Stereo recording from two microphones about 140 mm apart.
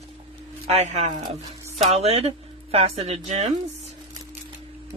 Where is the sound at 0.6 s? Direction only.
50° right (ahead or behind).